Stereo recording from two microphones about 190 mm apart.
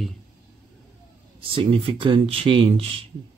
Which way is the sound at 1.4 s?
30° right (ahead or behind).